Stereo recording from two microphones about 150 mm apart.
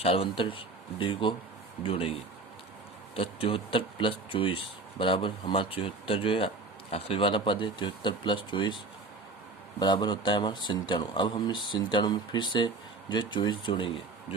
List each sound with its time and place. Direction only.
0.0 s speech: 40° left (ahead or behind)
3.2 s speech: 35° left (ahead or behind)
9.8 s speech: 30° left (ahead or behind)